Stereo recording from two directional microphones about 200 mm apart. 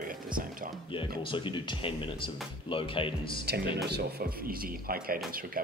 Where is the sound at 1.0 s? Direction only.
25° left (ahead or behind).